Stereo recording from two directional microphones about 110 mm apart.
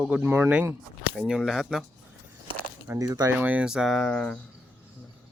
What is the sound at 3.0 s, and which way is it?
Speech, 35° right (ahead or behind).